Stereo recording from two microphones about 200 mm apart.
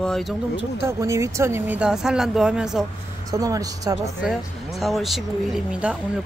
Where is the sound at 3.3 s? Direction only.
15° right (ahead or behind).